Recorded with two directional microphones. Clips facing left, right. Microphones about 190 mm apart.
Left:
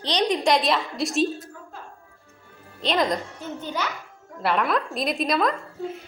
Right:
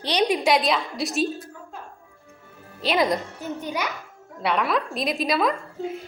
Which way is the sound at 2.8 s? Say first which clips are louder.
Right 1 dB; 5° right (ahead or behind).